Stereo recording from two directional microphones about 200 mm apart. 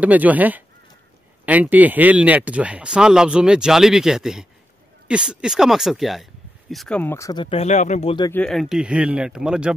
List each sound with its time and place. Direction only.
0.0 s speech: 10° right (ahead or behind); by 8.3 s 30° left (ahead or behind)
8.3 s speech: 5° left (ahead or behind)